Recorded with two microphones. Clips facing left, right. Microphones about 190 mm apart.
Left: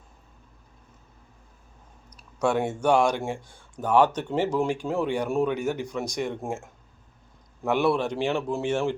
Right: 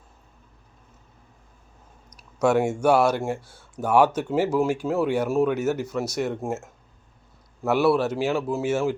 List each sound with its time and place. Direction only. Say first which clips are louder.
2.4 s speech: right 4 dB; 10° right (ahead or behind)
7.6 s a man's voice: right 3 dB; 5° right (ahead or behind)